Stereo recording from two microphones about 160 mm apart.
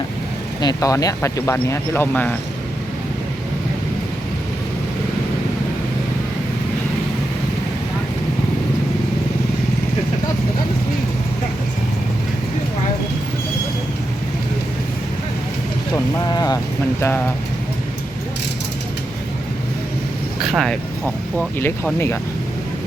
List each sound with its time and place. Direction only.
0.6 s speech: 25° left (ahead or behind)
16.2 s vehicle: 25° left (ahead or behind)
20.4 s speech: centre (ahead or behind)
21.3 s speech: 10° left (ahead or behind)